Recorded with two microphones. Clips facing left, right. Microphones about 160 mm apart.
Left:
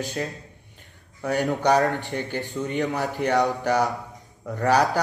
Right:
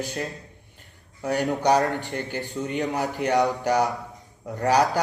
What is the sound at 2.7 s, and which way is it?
Speech, 20° right (ahead or behind).